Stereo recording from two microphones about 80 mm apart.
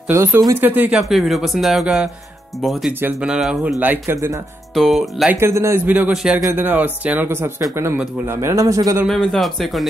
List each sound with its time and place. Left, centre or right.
0.1 s speech: right
0.6 s speech: right
0.9 s a man's voice: centre
3.8 s speech: right
4.7 s speech: centre
5.4 s speech: right
5.9 s a man's voice: centre; by 9.0 s right
9.0 s speech: centre